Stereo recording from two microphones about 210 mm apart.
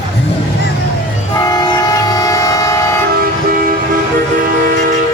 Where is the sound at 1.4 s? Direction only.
20° left (ahead or behind).